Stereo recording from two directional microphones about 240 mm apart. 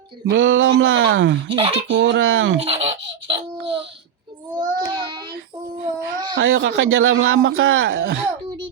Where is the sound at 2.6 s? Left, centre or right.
Right.